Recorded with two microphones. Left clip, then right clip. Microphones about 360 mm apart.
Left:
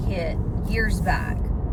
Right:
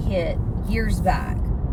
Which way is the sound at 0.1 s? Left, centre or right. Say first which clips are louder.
Right 5 dB; centre.